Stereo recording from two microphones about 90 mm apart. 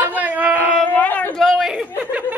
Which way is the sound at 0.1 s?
20° right (ahead or behind).